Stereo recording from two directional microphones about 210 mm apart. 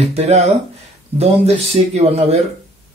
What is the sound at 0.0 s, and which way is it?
Speech, 30° right (ahead or behind).